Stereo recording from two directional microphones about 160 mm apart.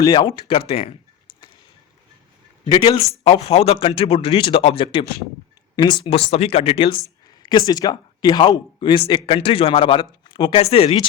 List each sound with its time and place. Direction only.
0.0 s a man's voice: 30° left (ahead or behind)
2.6 s a man's voice: 30° left (ahead or behind)